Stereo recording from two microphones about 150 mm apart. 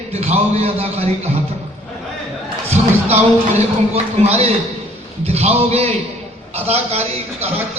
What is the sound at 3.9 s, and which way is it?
A man's voice, 45° right (ahead or behind).